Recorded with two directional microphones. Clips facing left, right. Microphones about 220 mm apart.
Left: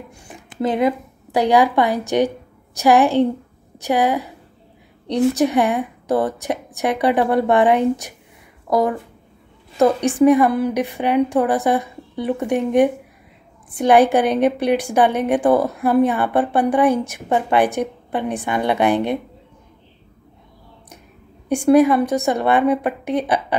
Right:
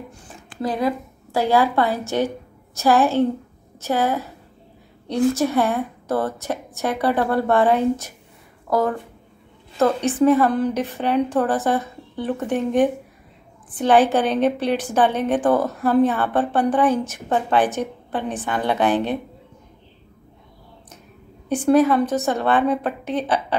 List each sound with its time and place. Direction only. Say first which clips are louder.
0.1 s a sound: left 2 dB; 15° left (ahead or behind)
0.5 s a woman's voice: left 4 dB; 20° left (ahead or behind)
21.5 s a woman's voice: left 3 dB; 10° left (ahead or behind)